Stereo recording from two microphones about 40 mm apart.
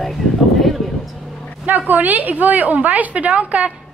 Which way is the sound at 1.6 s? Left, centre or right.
Right.